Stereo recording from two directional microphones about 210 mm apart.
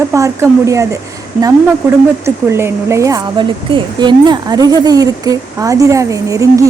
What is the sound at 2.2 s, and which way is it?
Speech, 10° right (ahead or behind).